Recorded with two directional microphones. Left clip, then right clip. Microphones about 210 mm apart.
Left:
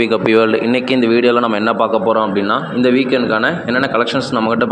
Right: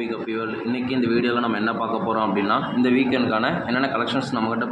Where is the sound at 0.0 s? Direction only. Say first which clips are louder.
Left 15 dB; 45° left (ahead or behind).